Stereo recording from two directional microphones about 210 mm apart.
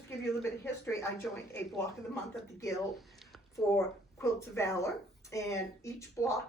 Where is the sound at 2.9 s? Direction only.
Centre (ahead or behind).